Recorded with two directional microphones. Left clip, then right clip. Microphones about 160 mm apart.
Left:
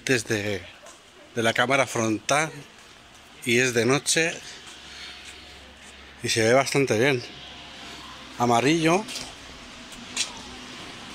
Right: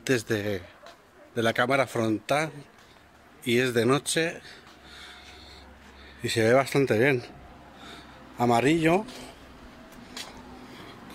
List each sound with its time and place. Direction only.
0.0 s a man's voice: 15° right (ahead or behind)
6.2 s a man's voice: 15° right (ahead or behind)
8.4 s a man's voice: 25° right (ahead or behind)
8.6 s a man's voice: 15° right (ahead or behind)